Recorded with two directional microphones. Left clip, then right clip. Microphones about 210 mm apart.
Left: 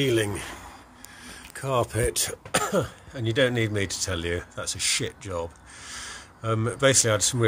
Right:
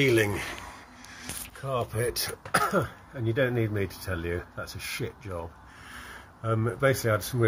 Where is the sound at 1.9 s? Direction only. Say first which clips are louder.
Left 3 dB; 35° left (ahead or behind).